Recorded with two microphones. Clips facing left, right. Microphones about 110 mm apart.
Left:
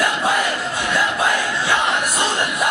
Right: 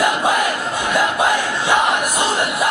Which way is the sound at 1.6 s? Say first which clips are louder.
Right 4 dB; 15° right (ahead or behind).